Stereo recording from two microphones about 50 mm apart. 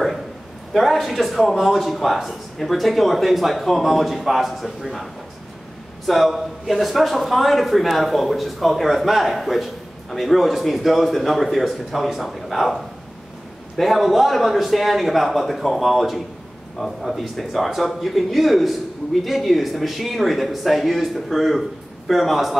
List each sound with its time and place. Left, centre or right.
0.7 s speech: centre
6.0 s speech: centre